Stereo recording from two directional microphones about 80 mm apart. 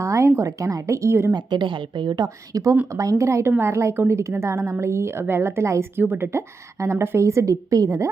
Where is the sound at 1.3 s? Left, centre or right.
Right.